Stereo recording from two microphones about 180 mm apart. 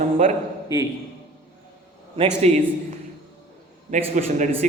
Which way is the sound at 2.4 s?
40° right (ahead or behind).